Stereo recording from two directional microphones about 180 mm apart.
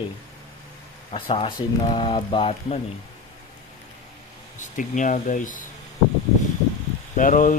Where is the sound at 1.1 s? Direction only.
30° left (ahead or behind).